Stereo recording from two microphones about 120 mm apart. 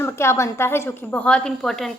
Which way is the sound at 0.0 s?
20° left (ahead or behind).